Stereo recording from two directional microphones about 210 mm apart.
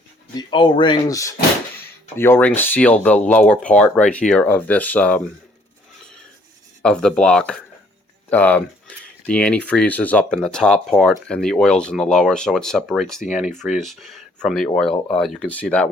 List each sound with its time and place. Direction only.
0.3 s speech: 20° left (ahead or behind); by 5.2 s 5° left (ahead or behind)
6.8 s speech: 5° left (ahead or behind)